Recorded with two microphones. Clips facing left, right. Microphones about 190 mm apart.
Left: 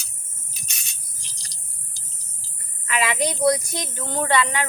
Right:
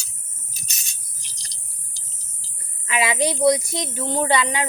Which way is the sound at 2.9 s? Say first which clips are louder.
Right 2 dB; 15° right (ahead or behind).